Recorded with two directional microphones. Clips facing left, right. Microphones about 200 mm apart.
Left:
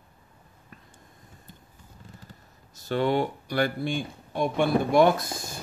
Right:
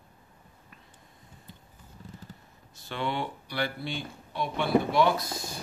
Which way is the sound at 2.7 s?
40° left (ahead or behind).